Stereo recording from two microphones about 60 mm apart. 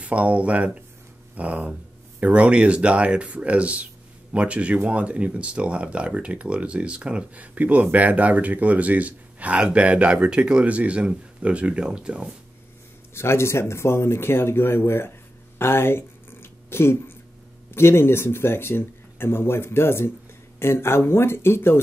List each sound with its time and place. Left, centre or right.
0.0 s speech: right
13.1 s speech: left
15.6 s a sound: left
17.6 s speech: left